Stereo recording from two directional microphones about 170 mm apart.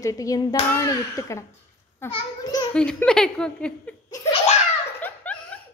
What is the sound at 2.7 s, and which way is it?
Speech, 5° left (ahead or behind).